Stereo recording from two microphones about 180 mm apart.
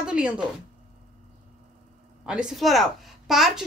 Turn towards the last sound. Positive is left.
turn(degrees=0)  # may be behind; listen again after turning